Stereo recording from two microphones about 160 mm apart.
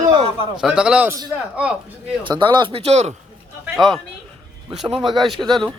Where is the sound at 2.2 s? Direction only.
30° right (ahead or behind).